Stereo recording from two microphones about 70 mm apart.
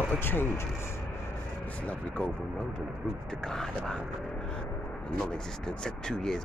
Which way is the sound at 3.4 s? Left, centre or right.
Centre.